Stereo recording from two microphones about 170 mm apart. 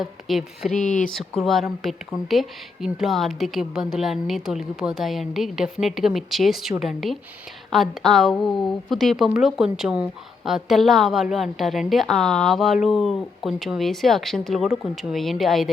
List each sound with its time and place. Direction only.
0.0 s a woman's voice: centre (ahead or behind)
0.8 s speech: 45° left (ahead or behind)
1.0 s a woman's voice: 5° left (ahead or behind)